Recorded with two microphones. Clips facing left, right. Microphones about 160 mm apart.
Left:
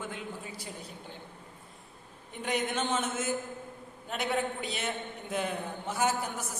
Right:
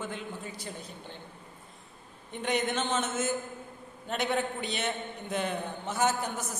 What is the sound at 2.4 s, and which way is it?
Speech, 5° left (ahead or behind).